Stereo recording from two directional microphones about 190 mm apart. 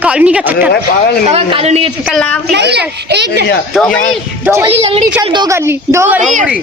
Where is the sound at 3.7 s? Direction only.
5° left (ahead or behind).